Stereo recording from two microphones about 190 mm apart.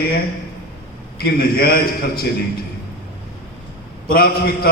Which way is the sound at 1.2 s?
50° left (ahead or behind).